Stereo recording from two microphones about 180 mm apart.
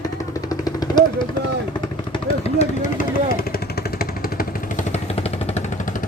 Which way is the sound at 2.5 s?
45° left (ahead or behind).